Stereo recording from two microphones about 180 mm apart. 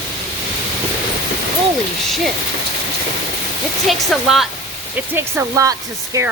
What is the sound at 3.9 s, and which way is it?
Speech, centre (ahead or behind).